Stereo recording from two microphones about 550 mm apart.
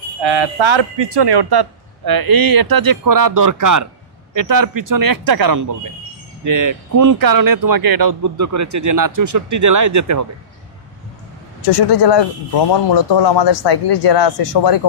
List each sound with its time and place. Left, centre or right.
0.2 s speech: right
12.0 s speech: left